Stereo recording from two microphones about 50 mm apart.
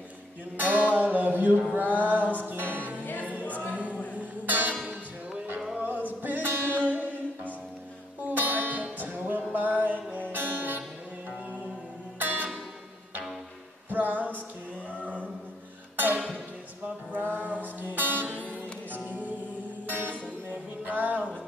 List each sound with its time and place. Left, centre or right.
0.6 s music: right
3.0 s music: left
3.3 s choir: right
4.1 s music: right
5.9 s music: right
8.3 s music: right
12.2 s music: right
13.8 s music: right
17.1 s music: right